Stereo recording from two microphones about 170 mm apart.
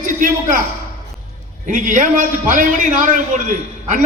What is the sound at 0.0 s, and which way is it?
Speech, 50° right (ahead or behind).